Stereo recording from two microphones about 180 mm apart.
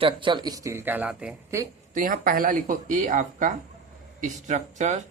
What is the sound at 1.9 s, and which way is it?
Speech, 50° right (ahead or behind).